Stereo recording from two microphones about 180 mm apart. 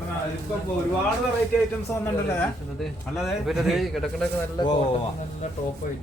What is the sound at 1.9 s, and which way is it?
Speech, 15° left (ahead or behind).